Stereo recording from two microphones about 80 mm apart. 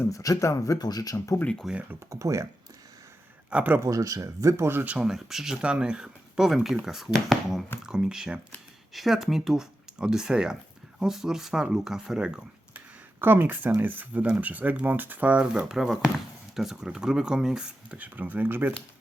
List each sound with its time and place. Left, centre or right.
0.1 s speech: left
1.6 s speech: centre
2.0 s speech: right
3.5 s speech: centre
3.8 s speech: right
4.9 s speech: centre
13.2 s speech: right
15.7 s speech: centre
17.9 s speech: centre